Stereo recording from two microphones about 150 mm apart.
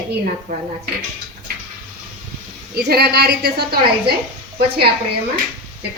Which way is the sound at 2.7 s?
90° right.